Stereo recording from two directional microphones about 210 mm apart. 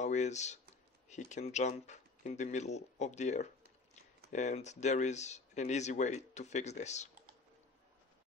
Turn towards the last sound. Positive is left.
turn(degrees=35)  # may be behind; listen again after turning